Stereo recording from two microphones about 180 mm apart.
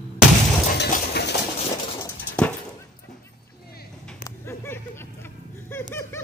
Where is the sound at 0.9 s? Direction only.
65° left (ahead or behind).